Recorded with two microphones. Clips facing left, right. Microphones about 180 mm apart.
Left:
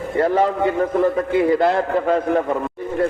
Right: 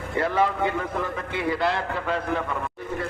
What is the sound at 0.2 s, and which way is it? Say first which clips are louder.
A man's voice: left 6 dB; 40° left (ahead or behind).